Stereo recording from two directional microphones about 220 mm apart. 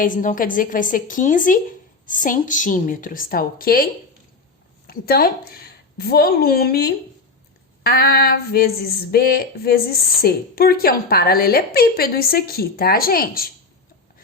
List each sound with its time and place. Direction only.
0.0 s a woman's voice: 35° left (ahead or behind)
4.9 s a woman's voice: 45° left (ahead or behind)
7.9 s a sound: 45° left (ahead or behind)